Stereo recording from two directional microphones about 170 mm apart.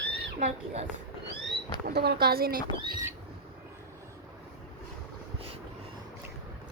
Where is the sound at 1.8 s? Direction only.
70° right (ahead or behind).